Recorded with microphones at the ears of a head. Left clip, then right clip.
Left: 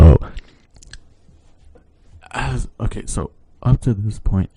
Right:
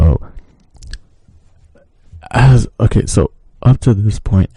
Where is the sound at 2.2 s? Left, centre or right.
Right.